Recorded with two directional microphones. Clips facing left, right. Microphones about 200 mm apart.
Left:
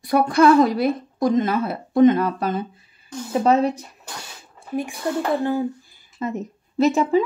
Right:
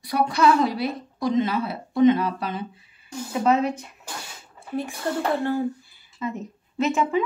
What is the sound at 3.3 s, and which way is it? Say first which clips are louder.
Speech: left 3 dB; 35° left (ahead or behind).